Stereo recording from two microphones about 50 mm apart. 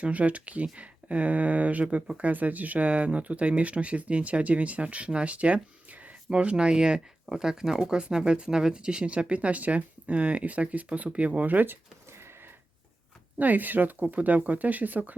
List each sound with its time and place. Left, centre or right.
0.0 s speech: right
13.4 s speech: right